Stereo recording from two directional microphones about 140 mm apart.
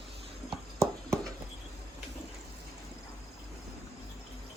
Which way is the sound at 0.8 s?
20° right (ahead or behind).